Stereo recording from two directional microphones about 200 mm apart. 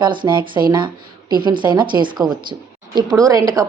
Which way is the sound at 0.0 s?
25° right (ahead or behind).